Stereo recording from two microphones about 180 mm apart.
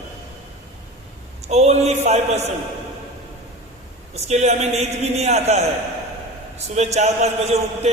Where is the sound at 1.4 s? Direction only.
35° right (ahead or behind).